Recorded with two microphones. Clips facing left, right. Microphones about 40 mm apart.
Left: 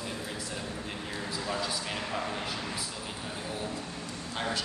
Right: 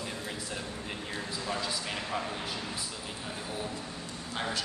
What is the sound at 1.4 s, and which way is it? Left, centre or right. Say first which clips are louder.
Speech: left 1 dB; centre.